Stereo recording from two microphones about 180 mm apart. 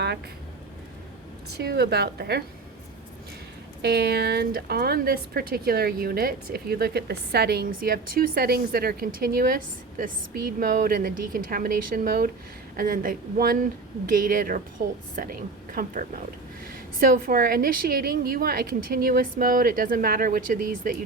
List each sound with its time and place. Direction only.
1.5 s speech: 65° right (ahead or behind)
3.8 s a woman's voice: 65° right (ahead or behind)